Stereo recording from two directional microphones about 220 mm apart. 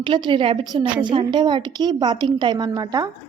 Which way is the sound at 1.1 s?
20° right (ahead or behind).